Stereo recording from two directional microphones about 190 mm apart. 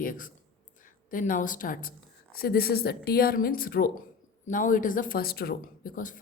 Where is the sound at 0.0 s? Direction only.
45° left (ahead or behind).